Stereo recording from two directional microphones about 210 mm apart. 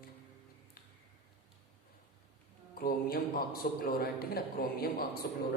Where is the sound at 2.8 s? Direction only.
45° left (ahead or behind).